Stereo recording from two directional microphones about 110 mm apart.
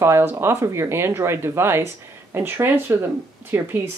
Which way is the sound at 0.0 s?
25° right (ahead or behind).